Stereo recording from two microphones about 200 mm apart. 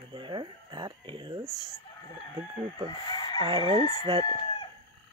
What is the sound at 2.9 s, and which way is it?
Chicken, 20° left (ahead or behind).